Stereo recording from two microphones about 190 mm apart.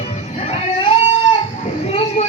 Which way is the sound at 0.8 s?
30° left (ahead or behind).